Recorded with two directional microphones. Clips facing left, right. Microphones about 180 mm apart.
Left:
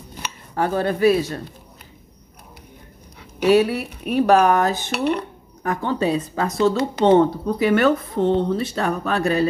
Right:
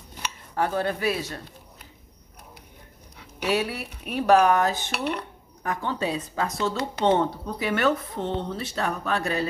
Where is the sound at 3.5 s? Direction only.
50° left (ahead or behind).